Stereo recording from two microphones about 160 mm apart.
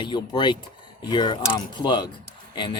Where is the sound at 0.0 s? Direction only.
30° left (ahead or behind).